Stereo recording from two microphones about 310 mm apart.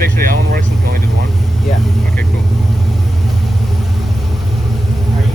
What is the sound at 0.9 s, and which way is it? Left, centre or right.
Speech, right.